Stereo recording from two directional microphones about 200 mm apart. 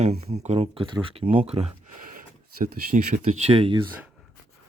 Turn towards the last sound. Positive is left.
turn(degrees=-30)  # may be behind; listen again after turning